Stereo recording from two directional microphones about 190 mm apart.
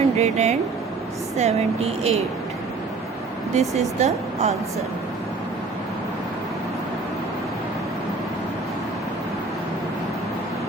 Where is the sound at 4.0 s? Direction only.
35° right (ahead or behind).